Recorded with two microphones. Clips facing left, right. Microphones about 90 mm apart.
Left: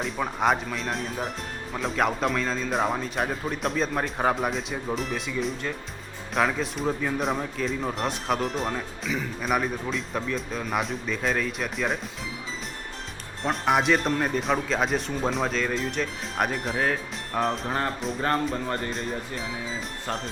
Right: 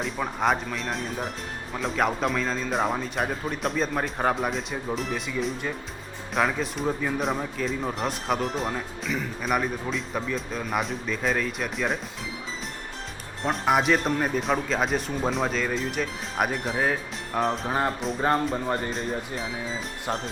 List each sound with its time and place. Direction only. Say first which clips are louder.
0.0 s speech: left 1 dB; centre (ahead or behind)
13.4 s speech: even; centre (ahead or behind)
18.2 s speech: right 2 dB; 10° right (ahead or behind)
18.9 s speech: right 1 dB; centre (ahead or behind)